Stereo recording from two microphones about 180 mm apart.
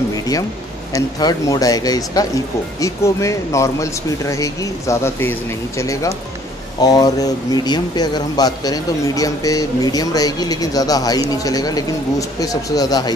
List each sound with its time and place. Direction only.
0.9 s speech: 20° left (ahead or behind)